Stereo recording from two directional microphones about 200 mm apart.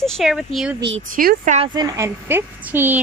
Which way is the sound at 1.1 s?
45° right (ahead or behind).